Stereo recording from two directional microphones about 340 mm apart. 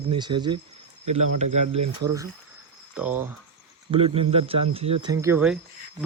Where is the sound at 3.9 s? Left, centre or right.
Centre.